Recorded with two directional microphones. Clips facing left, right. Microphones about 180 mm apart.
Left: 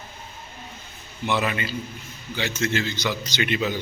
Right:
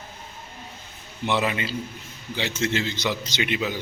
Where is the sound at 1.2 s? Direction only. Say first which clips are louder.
Even; 25° right (ahead or behind).